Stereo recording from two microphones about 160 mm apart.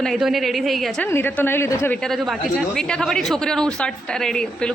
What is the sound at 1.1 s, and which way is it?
Speech, 15° left (ahead or behind).